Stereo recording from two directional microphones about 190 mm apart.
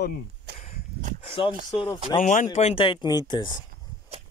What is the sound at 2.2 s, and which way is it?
Speech, 40° left (ahead or behind).